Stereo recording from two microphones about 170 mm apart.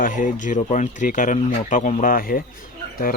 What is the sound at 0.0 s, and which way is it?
Speech, 50° left (ahead or behind).